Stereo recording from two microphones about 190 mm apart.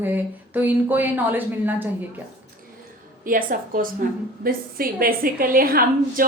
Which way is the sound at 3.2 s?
45° right (ahead or behind).